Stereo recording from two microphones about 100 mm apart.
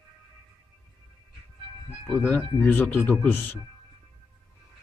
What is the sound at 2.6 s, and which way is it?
Speech, 20° left (ahead or behind).